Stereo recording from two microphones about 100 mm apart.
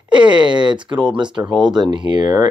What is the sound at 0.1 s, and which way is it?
Speech, 50° right (ahead or behind).